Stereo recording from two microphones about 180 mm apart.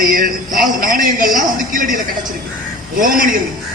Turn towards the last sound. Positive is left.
turn(degrees=-50)  # may be behind; listen again after turning